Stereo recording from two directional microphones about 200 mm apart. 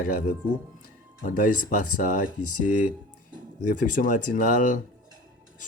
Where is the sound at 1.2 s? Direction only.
45° left (ahead or behind).